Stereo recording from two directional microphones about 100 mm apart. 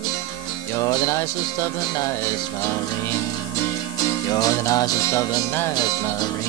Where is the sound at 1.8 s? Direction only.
45° left (ahead or behind).